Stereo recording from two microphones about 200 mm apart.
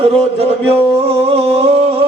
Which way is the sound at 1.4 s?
30° right (ahead or behind).